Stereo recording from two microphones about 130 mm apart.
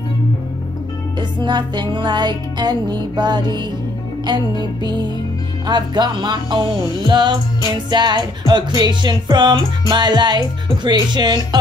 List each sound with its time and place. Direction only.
1.4 s music: 35° right (ahead or behind)